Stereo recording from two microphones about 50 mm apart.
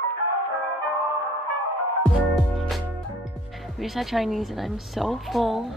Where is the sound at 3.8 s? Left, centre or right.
Centre.